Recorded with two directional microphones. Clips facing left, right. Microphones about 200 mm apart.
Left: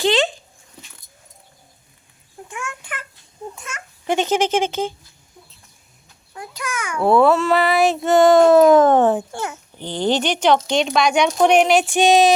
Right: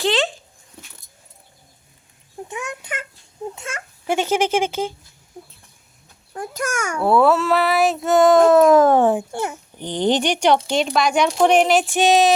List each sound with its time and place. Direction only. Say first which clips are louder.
0.0 s dog: left 2 dB; centre (ahead or behind)
2.5 s a sound: right 2 dB; 20° right (ahead or behind)
4.0 s speech: left 1 dB; 10° right (ahead or behind)
6.3 s a child's voice: right 4 dB; 45° right (ahead or behind)
7.0 s child singing: left 2 dB; 5° right (ahead or behind)
9.7 s speech: right 1 dB; 15° right (ahead or behind)
10.7 s child singing: left 1 dB; 5° right (ahead or behind)